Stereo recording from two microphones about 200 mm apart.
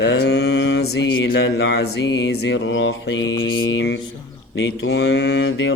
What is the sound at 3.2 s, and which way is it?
Mantra, 20° left (ahead or behind).